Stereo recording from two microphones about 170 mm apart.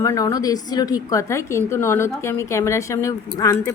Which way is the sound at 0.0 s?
15° left (ahead or behind).